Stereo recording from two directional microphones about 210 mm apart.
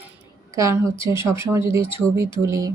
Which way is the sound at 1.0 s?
10° right (ahead or behind).